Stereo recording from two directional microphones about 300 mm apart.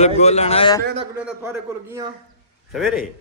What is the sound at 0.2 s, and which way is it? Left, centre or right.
Speech, left.